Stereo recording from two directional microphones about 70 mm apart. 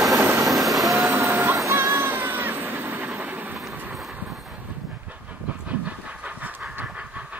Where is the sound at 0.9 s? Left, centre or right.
Right.